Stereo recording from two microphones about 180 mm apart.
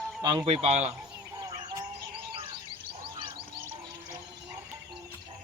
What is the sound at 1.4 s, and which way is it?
Bird, 20° right (ahead or behind).